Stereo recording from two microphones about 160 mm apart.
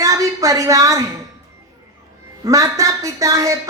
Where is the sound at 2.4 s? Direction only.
20° right (ahead or behind).